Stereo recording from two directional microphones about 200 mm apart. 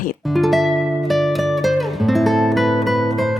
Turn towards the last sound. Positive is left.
turn(degrees=0)  # may be behind; listen again after turning